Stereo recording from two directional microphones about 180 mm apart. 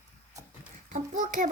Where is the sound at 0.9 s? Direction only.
45° right (ahead or behind).